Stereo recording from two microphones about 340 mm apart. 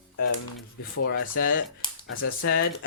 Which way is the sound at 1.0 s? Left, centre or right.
Left.